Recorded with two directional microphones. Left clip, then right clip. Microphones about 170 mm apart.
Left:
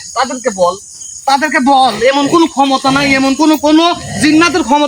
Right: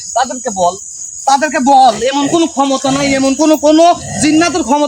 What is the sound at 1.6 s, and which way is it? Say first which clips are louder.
Speech: right 3 dB; 15° right (ahead or behind).